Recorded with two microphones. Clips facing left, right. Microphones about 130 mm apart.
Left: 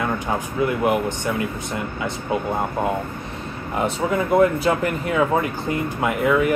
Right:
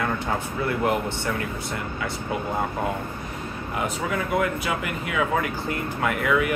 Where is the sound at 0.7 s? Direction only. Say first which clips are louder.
Left 3 dB; 15° left (ahead or behind).